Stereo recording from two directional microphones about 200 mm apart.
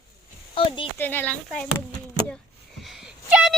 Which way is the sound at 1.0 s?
10° left (ahead or behind).